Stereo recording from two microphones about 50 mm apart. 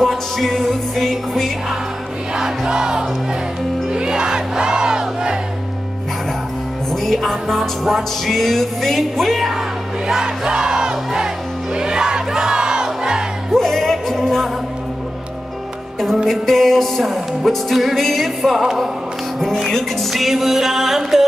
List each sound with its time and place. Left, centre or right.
0.0 s music: centre
2.3 s music: centre
6.9 s music: centre
10.0 s music: centre
11.7 s crowd: centre
13.5 s music: centre
16.3 s music: centre
19.4 s music: centre